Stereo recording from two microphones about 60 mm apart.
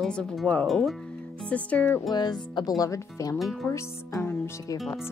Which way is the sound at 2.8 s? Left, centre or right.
Left.